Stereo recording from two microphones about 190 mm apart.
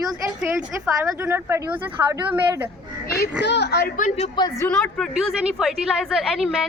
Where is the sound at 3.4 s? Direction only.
60° left (ahead or behind); by 4.3 s 40° left (ahead or behind).